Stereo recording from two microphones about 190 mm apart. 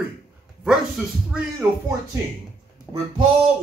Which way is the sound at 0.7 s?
5° right (ahead or behind).